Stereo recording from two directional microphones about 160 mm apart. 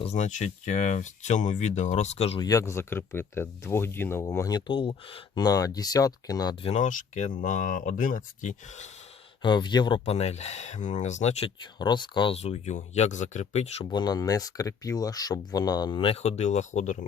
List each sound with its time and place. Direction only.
0.0 s speech: 45° left (ahead or behind)
2.4 s speech: 20° left (ahead or behind)
6.7 s speech: 50° left (ahead or behind)
9.4 s speech: 30° left (ahead or behind)
10.1 s speech: 40° left (ahead or behind)
13.9 s speech: 25° left (ahead or behind); by 17.1 s 50° left (ahead or behind)